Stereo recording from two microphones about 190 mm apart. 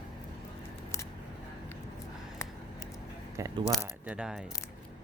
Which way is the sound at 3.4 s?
15° right (ahead or behind).